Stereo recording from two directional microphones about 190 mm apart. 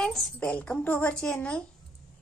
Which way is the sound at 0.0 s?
Centre (ahead or behind).